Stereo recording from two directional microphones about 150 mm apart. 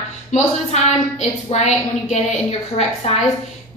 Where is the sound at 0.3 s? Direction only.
50° left (ahead or behind).